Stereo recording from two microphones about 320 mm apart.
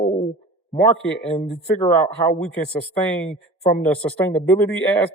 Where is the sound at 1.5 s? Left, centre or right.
Centre.